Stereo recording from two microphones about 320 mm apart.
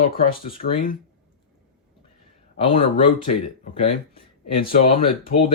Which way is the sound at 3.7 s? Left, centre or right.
Centre.